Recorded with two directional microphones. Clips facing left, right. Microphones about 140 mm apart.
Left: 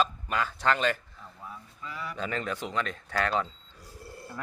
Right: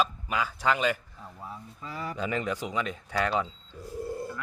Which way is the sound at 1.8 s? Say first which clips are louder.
Right 2 dB; 40° right (ahead or behind).